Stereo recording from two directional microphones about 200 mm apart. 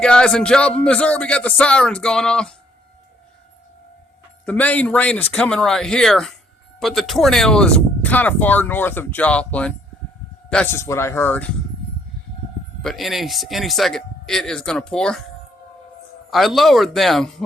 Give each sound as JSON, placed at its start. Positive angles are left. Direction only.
{"t": 0.0, "sound": "speech", "side_deg": 5}
{"t": 4.4, "sound": "speech", "side_deg": 5}
{"t": 12.8, "sound": "speech", "side_deg": 0}
{"t": 16.3, "sound": "speech", "side_deg": 0}